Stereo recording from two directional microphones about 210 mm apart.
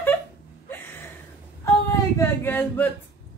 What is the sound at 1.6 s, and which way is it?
Female singing, 15° left (ahead or behind).